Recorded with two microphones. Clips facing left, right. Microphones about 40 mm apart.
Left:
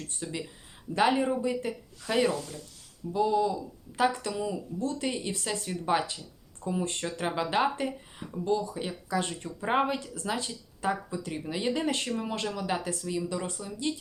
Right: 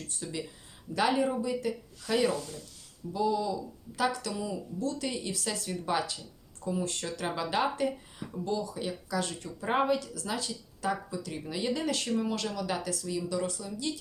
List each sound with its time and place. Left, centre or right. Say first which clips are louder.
0.2 s speech: left 1 dB; left